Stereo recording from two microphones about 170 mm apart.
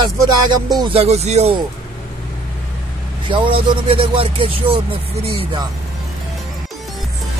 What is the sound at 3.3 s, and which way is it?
Speech, 30° right (ahead or behind).